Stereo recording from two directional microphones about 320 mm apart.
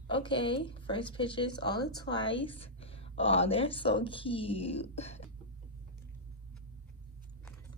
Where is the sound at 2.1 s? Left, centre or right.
Left.